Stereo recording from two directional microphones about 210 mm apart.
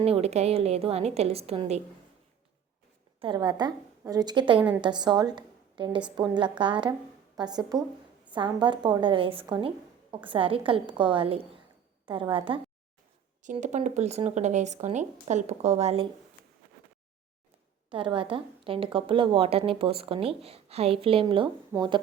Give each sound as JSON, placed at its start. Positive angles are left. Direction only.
{"t": 0.0, "sound": "a woman's voice", "side_deg": -30}
{"t": 3.2, "sound": "a woman's voice", "side_deg": -20}
{"t": 13.4, "sound": "speech", "side_deg": -35}
{"t": 17.9, "sound": "a woman's voice", "side_deg": -25}